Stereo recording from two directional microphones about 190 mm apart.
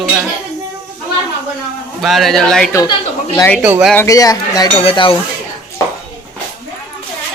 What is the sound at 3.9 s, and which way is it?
Speech, 15° left (ahead or behind).